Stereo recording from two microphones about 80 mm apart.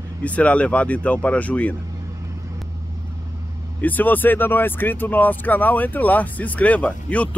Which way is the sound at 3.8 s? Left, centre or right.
Left.